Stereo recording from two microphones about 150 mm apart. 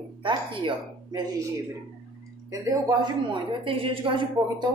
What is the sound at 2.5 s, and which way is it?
A woman's voice, 25° right (ahead or behind).